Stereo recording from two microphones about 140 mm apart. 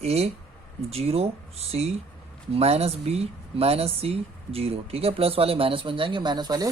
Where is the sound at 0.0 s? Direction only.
50° right (ahead or behind).